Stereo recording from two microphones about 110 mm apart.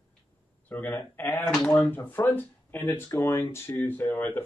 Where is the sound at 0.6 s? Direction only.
15° left (ahead or behind).